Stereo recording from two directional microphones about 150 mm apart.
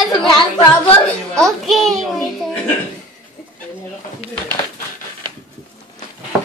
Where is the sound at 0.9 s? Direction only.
5° left (ahead or behind).